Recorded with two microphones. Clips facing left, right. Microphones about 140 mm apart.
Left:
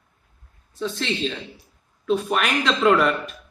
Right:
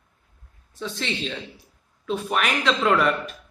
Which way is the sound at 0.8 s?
5° right (ahead or behind).